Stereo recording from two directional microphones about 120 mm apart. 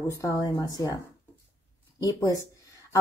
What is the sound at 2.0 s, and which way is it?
Speech, 30° left (ahead or behind).